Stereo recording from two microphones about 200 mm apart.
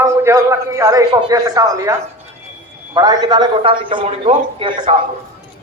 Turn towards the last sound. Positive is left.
turn(degrees=-30)  # may be behind; listen again after turning